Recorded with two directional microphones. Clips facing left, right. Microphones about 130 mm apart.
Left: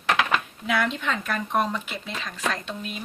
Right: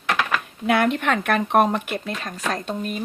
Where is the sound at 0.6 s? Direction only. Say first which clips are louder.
Right 6 dB; 55° right (ahead or behind).